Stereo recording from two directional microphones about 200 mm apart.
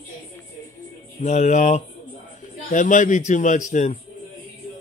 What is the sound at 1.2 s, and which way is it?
A man's voice, 35° left (ahead or behind).